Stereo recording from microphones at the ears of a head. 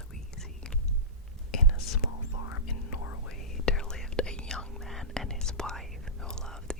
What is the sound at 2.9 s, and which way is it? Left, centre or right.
Whispering, left.